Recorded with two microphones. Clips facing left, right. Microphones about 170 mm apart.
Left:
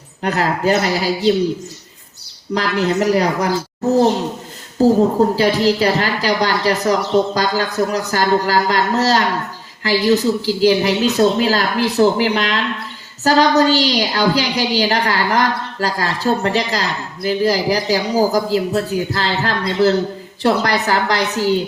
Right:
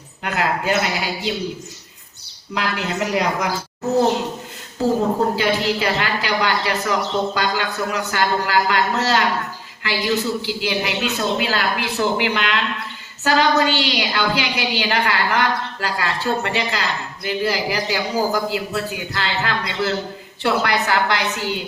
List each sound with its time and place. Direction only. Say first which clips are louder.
0.2 s a woman's voice: left 4 dB; 35° left (ahead or behind)
2.6 s a woman's voice: left 6 dB; 35° left (ahead or behind)
4.8 s a woman's voice: left 6 dB; 40° left (ahead or behind)